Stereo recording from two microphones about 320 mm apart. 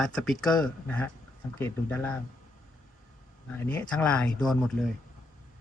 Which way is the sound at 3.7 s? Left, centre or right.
Centre.